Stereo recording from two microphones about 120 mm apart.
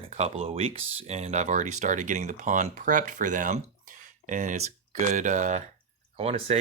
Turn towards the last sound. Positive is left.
turn(degrees=-60)  # may be behind; listen again after turning